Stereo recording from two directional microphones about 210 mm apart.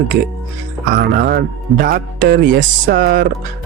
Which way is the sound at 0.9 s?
45° right (ahead or behind).